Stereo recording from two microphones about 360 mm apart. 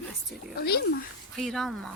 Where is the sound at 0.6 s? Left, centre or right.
Left.